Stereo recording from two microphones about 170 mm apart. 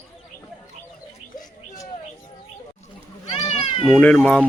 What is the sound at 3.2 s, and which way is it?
Cat, 40° left (ahead or behind).